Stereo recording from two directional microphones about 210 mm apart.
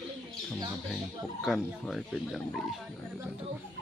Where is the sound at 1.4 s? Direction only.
Centre (ahead or behind).